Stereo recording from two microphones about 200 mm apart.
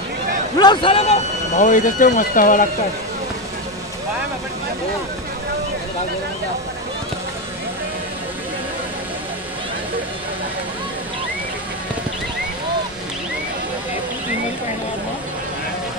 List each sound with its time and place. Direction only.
0.6 s speech: 25° left (ahead or behind); by 2.7 s 40° left (ahead or behind)